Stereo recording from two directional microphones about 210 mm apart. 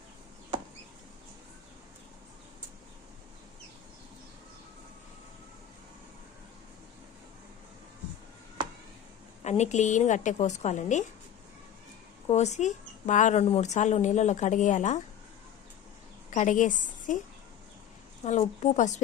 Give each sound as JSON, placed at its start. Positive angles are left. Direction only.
{"t": 9.4, "sound": "speech", "side_deg": 30}
{"t": 12.3, "sound": "speech", "side_deg": 35}
{"t": 16.3, "sound": "a woman's voice", "side_deg": 35}
{"t": 18.3, "sound": "speech", "side_deg": 35}